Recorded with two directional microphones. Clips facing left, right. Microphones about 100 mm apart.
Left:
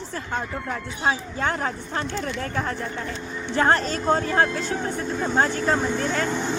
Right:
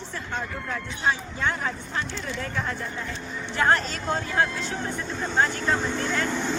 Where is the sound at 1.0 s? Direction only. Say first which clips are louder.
Left 2 dB; 45° left (ahead or behind).